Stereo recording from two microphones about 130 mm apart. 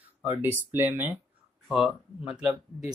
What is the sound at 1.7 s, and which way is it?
Speech, 5° right (ahead or behind).